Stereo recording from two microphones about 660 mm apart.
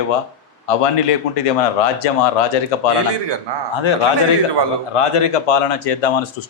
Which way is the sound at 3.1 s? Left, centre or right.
Right.